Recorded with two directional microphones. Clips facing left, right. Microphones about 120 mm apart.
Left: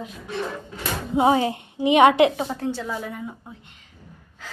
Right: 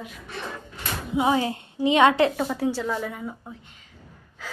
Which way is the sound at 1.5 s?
15° left (ahead or behind).